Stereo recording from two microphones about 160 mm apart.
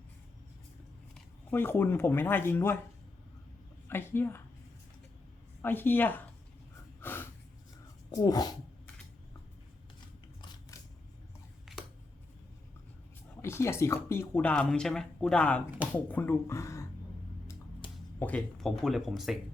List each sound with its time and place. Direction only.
1.5 s speech: 15° left (ahead or behind)
3.8 s speech: 15° left (ahead or behind)
5.6 s speech: 10° left (ahead or behind)
7.0 s a sound: 15° left (ahead or behind)
8.1 s speech: 25° left (ahead or behind)
11.6 s a sound: 5° right (ahead or behind)
13.4 s speech: 15° left (ahead or behind)
17.8 s music: 30° left (ahead or behind)
18.2 s speech: 5° left (ahead or behind)